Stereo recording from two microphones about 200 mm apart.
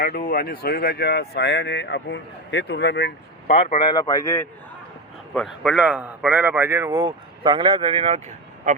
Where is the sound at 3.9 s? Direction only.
20° left (ahead or behind).